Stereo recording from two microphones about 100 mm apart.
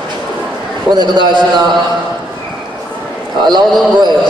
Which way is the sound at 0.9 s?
50° right (ahead or behind).